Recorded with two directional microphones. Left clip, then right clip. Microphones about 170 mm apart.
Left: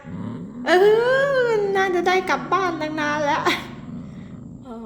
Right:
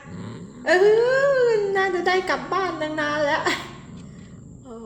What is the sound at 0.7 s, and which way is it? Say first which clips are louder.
A woman's voice: left 1 dB; 20° left (ahead or behind).